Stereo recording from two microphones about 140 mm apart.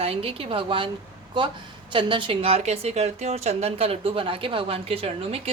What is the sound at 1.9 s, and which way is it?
A woman's voice, 35° right (ahead or behind).